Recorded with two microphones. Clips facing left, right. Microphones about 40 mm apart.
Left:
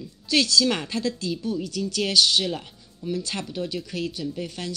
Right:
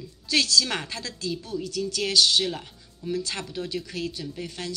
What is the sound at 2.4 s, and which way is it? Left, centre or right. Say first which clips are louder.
Music: left 2 dB; centre.